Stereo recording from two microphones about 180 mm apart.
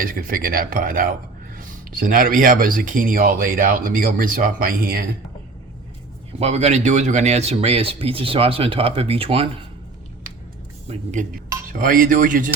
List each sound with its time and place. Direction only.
0.0 s speech: 55° right (ahead or behind)
6.4 s speech: 35° right (ahead or behind)
10.8 s speech: 45° right (ahead or behind)